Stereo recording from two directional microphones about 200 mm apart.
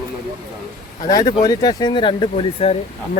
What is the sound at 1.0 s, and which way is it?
Speech, 20° left (ahead or behind).